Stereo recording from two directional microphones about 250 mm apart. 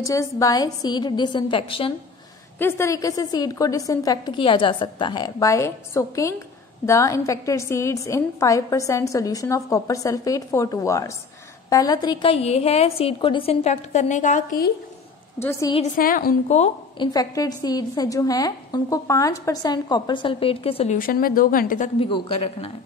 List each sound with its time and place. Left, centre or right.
0.0 s a woman's voice: centre; by 14.7 s left
15.4 s a woman's voice: centre
15.8 s a woman's voice: left